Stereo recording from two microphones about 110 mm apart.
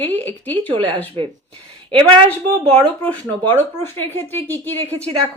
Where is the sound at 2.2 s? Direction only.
60° right (ahead or behind).